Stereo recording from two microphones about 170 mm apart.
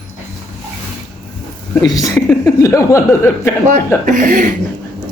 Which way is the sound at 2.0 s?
20° left (ahead or behind).